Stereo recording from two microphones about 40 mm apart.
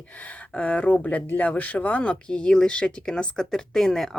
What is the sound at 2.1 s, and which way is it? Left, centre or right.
Speech, left.